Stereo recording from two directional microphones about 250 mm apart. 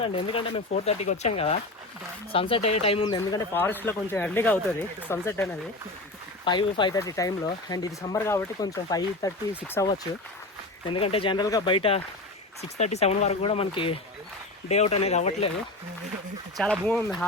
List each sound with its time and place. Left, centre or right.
0.1 s speech: left
6.4 s speech: centre
10.8 s speech: left
16.6 s speech: centre